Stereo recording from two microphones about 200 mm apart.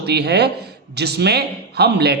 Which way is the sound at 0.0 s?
55° right (ahead or behind).